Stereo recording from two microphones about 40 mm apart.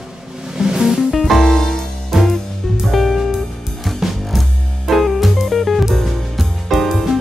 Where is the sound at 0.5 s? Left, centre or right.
Centre.